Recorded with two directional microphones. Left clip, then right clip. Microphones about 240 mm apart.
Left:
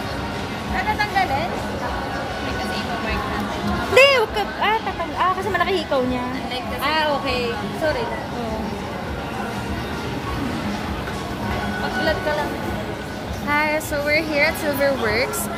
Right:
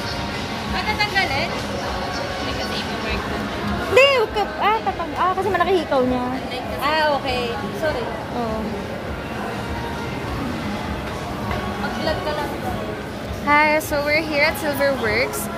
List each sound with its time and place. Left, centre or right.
3.9 s a sound: centre
5.2 s a woman's voice: right
6.8 s speech: left
13.5 s a woman's voice: centre
14.0 s speech: centre